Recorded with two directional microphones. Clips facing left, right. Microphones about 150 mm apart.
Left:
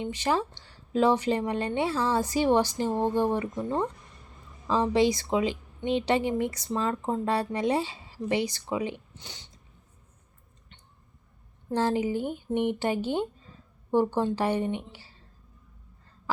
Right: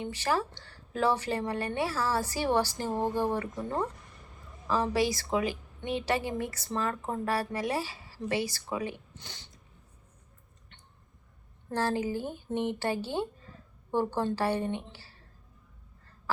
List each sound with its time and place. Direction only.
0.0 s a woman's voice: 20° left (ahead or behind)
11.7 s a woman's voice: 15° left (ahead or behind)